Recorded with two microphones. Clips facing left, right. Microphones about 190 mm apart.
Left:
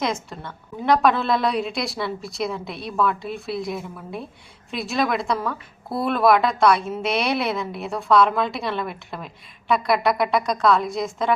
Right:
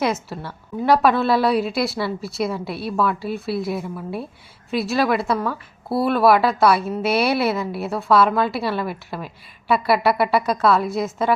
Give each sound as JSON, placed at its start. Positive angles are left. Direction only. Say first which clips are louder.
{"t": 0.0, "sound": "a woman's voice", "louder": "right 3 dB", "side_deg": -5}